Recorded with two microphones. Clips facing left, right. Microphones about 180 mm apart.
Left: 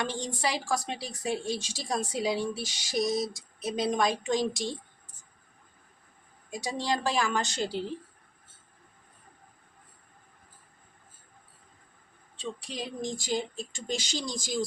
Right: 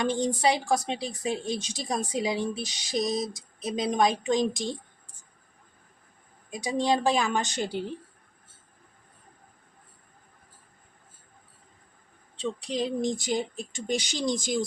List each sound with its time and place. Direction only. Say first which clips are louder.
0.6 s a woman's voice: right 4 dB; 20° right (ahead or behind)
6.5 s a woman's voice: right 5 dB; 20° right (ahead or behind)
12.4 s a woman's voice: right 7 dB; 20° right (ahead or behind)